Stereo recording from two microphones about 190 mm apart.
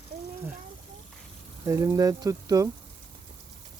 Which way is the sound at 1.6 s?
15° right (ahead or behind).